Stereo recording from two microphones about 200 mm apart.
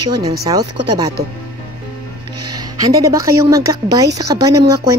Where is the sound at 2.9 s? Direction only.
15° right (ahead or behind).